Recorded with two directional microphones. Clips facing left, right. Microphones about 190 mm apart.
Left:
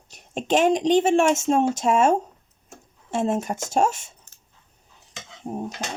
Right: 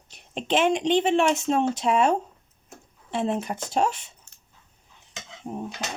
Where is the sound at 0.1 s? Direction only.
45° left (ahead or behind).